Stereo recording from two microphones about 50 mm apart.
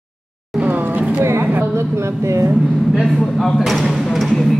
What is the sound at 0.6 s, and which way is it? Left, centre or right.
Vehicle, right.